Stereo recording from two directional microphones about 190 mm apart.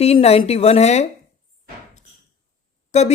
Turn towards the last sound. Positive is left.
turn(degrees=35)  # may be behind; listen again after turning